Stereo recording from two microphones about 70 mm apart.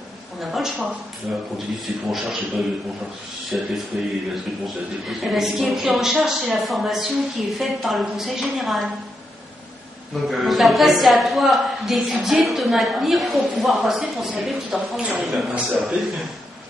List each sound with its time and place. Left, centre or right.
0.4 s a sound: centre
1.3 s a man's voice: centre
3.5 s a man's voice: centre
5.2 s a woman's voice: centre
10.2 s a woman's voice: centre